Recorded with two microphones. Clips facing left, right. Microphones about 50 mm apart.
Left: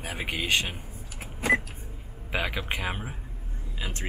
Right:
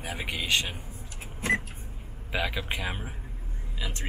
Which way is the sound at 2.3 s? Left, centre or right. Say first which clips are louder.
Left 1 dB; centre.